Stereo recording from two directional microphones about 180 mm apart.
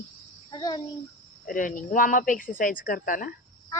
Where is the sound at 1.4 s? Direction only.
50° left (ahead or behind).